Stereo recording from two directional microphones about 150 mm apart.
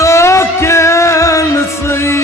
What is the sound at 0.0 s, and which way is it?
Music, 20° left (ahead or behind).